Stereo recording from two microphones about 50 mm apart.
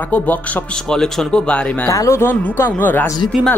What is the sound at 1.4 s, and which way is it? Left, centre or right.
Speech, left.